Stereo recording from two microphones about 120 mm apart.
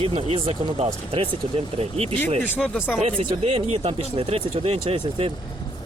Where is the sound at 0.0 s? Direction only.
55° right (ahead or behind).